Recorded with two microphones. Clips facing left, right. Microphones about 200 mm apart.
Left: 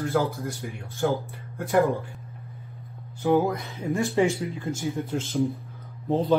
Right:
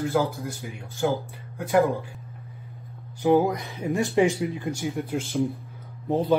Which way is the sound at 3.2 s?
15° right (ahead or behind).